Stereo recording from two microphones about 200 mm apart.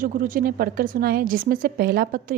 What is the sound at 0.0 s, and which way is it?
A woman's voice, 45° right (ahead or behind).